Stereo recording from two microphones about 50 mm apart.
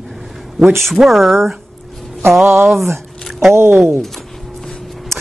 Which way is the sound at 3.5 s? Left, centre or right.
Right.